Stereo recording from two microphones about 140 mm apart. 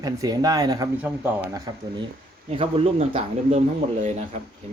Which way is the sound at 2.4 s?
40° right (ahead or behind).